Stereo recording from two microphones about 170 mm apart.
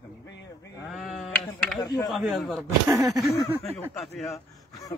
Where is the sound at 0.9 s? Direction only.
Centre (ahead or behind).